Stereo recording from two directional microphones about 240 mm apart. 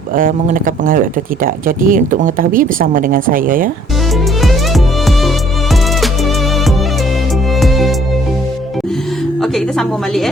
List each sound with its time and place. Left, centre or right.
0.2 s speech: right
4.4 s music: centre
7.6 s music: centre
9.4 s a woman's voice: centre